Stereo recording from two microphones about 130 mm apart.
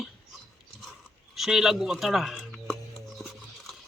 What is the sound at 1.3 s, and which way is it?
Speech, centre (ahead or behind).